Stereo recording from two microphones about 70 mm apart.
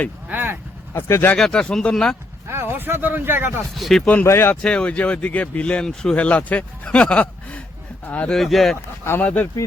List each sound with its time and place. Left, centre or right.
0.3 s vehicle: right
0.9 s speech: left
1.4 s speech: centre
2.5 s speech: right
3.8 s speech: centre
4.0 s speech: left
4.3 s speech: left
4.6 s speech: centre
8.4 s speech: centre
9.2 s speech: left